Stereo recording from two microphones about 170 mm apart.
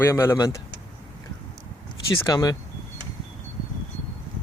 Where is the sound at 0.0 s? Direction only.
15° left (ahead or behind).